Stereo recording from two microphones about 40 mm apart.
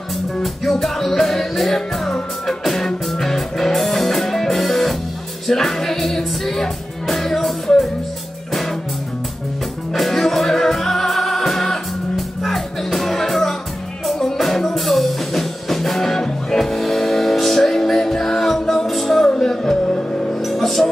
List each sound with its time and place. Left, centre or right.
0.4 s music: centre
9.9 s music: centre
19.2 s music: centre
20.4 s music: centre